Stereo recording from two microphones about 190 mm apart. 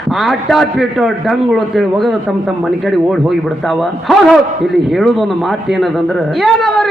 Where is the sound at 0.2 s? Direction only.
Centre (ahead or behind).